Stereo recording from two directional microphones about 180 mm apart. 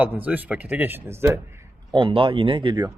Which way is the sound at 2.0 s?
30° right (ahead or behind).